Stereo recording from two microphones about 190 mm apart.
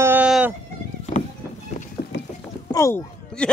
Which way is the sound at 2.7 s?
15° left (ahead or behind).